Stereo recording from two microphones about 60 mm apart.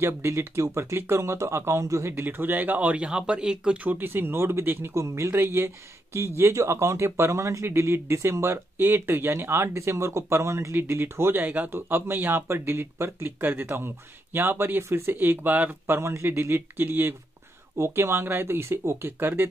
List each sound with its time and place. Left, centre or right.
0.0 s speech: right
2.1 s speech: right; by 3.7 s centre
3.7 s speech: right
4.9 s speech: right
5.3 s speech: right
8.7 s speech: right
11.4 s speech: right
15.1 s speech: right
15.9 s speech: right